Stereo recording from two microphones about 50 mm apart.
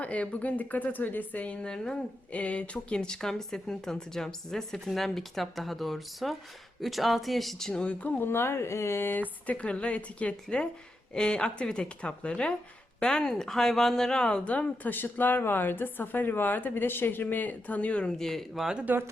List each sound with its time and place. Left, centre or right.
0.0 s speech: left
1.6 s speech: centre
2.3 s speech: left; by 7.7 s centre
7.7 s a woman's voice: left
8.2 s speech: left
9.0 s a woman's voice: left
14.8 s speech: left
18.2 s speech: centre
18.9 s speech: right